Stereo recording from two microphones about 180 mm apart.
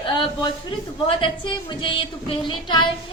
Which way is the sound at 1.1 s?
30° left (ahead or behind).